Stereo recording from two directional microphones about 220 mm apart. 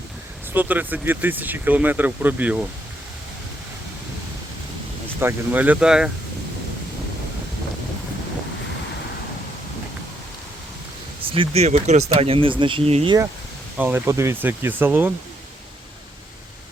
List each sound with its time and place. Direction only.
0.5 s speech: 10° right (ahead or behind)
5.2 s speech: 10° right (ahead or behind)
11.3 s speech: 25° right (ahead or behind)
13.7 s speech: 10° right (ahead or behind)